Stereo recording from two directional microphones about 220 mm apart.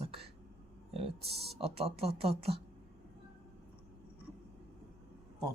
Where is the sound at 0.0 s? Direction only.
25° right (ahead or behind).